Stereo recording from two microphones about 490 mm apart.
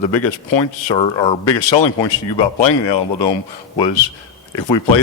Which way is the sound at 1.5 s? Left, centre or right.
Left.